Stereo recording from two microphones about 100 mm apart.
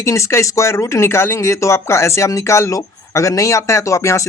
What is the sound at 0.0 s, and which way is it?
A man's voice, 30° left (ahead or behind).